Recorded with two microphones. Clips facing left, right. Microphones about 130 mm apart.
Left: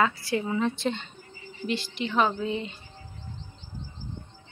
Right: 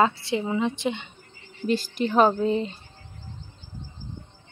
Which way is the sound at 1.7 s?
40° right (ahead or behind).